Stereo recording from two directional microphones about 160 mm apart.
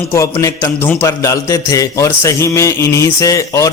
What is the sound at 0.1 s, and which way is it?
A man's voice, 20° left (ahead or behind).